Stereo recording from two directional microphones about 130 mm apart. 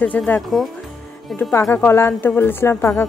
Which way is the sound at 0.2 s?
10° left (ahead or behind).